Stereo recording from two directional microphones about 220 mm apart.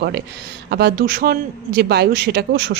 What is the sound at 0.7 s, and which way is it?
Speech, 45° right (ahead or behind).